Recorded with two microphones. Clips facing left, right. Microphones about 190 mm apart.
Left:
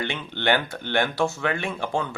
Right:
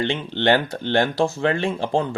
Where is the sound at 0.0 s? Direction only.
30° right (ahead or behind).